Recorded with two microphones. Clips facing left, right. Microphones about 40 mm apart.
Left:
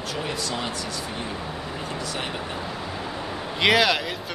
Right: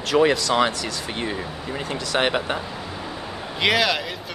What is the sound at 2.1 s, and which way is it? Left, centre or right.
Speech, right.